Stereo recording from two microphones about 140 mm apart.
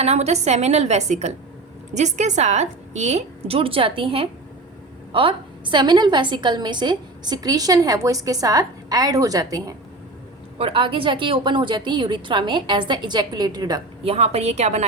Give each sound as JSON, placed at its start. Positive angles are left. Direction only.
{"t": 0.0, "sound": "a woman's voice", "side_deg": -50}
{"t": 10.6, "sound": "a woman's voice", "side_deg": -40}
{"t": 14.0, "sound": "a woman's voice", "side_deg": -45}